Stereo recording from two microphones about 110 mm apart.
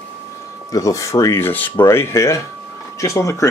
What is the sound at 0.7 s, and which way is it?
Speech, 30° left (ahead or behind).